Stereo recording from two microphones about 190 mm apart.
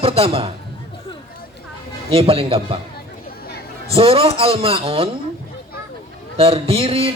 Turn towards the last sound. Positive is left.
turn(degrees=-30)  # may be behind; listen again after turning